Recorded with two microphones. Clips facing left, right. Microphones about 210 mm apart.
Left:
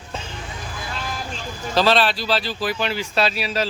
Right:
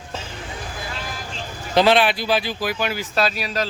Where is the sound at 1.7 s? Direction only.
15° right (ahead or behind).